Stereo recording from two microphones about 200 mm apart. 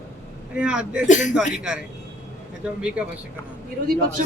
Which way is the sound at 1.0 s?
40° left (ahead or behind).